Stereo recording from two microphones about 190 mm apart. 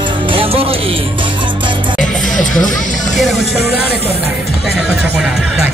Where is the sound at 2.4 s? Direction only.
45° left (ahead or behind).